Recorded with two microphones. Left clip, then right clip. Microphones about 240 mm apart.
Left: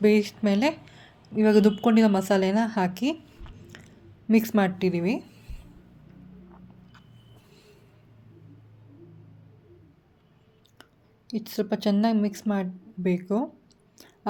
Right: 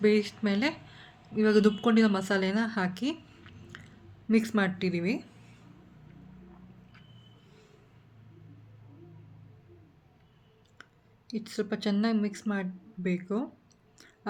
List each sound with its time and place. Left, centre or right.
0.0 s a woman's voice: centre
11.3 s speech: centre